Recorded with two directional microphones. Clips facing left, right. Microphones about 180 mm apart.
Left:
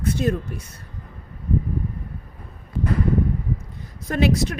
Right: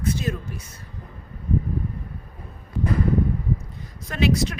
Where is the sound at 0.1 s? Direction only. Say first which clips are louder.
Left 5 dB; 55° left (ahead or behind).